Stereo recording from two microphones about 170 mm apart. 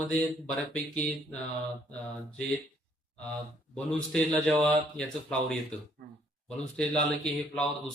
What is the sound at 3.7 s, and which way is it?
Speech, 5° left (ahead or behind).